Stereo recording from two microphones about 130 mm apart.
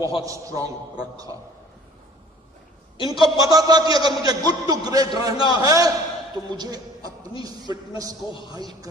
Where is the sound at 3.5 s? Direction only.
30° right (ahead or behind).